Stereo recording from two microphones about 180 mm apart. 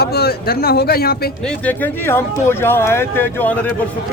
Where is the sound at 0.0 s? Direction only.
60° left (ahead or behind).